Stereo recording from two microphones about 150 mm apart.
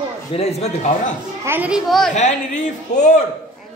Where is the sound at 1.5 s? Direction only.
10° right (ahead or behind).